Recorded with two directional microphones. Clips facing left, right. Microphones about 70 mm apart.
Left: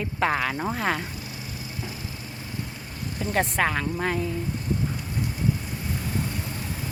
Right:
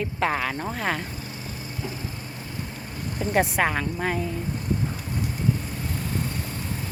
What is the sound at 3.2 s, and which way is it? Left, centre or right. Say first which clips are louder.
A woman's voice: right 2 dB; centre.